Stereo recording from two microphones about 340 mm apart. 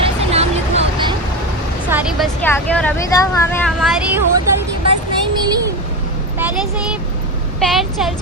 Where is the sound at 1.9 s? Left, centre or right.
Centre.